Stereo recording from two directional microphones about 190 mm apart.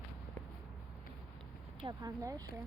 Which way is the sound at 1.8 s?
20° right (ahead or behind).